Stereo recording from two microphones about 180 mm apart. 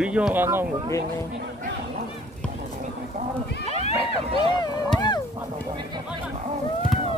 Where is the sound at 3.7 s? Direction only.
35° left (ahead or behind).